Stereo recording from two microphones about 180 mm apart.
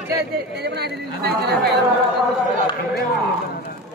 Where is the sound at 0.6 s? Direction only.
65° right (ahead or behind).